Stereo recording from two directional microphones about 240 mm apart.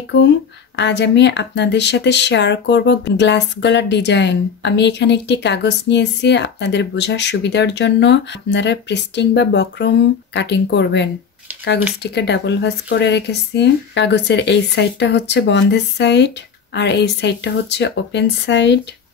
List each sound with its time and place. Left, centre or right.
0.7 s speech: left